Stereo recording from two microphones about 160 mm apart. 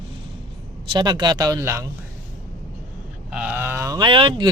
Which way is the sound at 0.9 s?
25° right (ahead or behind).